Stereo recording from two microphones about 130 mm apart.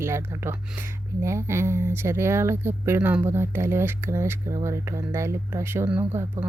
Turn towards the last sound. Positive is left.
turn(degrees=-15)  # may be behind; listen again after turning